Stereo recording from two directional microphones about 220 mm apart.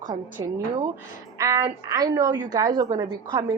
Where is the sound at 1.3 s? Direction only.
15° right (ahead or behind).